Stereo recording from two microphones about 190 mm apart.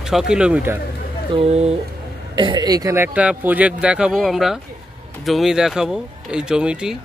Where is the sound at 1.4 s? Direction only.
35° right (ahead or behind).